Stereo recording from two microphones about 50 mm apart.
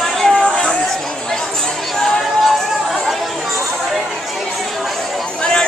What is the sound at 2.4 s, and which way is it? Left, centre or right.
Chatter, centre.